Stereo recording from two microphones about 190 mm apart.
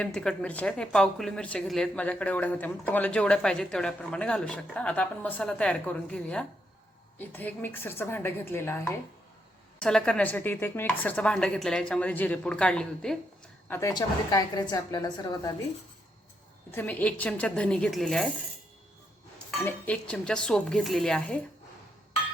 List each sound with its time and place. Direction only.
0.0 s a woman's voice: 5° left (ahead or behind)
13.7 s a woman's voice: 15° left (ahead or behind)
16.7 s speech: 10° left (ahead or behind)
19.5 s speech: 5° left (ahead or behind)